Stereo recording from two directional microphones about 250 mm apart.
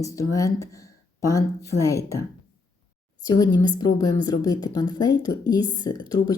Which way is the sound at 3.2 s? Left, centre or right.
Centre.